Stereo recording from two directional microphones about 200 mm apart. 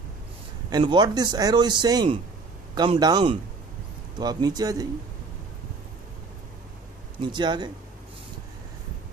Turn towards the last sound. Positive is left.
turn(degrees=-20)  # may be behind; listen again after turning